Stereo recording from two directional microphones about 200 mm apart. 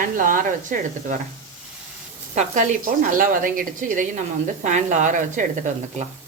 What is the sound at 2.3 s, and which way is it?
A woman's voice, 35° right (ahead or behind).